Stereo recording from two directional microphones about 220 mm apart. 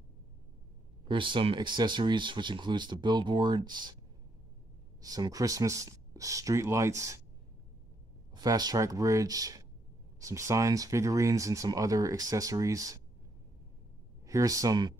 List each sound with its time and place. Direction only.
1.0 s speech: 20° right (ahead or behind)
5.0 s speech: 15° right (ahead or behind)
8.4 s speech: 20° right (ahead or behind)
14.2 s speech: 15° right (ahead or behind)